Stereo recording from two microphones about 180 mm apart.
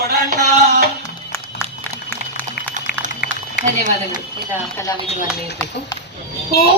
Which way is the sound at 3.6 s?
45° right (ahead or behind).